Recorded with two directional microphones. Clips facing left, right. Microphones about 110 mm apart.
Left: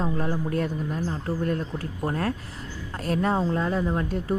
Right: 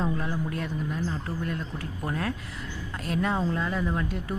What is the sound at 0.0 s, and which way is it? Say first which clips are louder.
Speech: left 2 dB; 40° left (ahead or behind).